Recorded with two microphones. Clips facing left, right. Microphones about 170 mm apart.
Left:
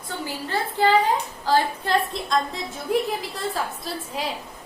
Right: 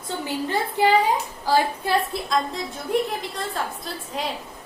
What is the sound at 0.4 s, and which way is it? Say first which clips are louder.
A woman's voice: even; 15° right (ahead or behind).